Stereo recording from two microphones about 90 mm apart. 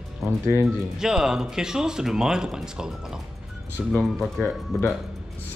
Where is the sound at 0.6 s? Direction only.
5° right (ahead or behind).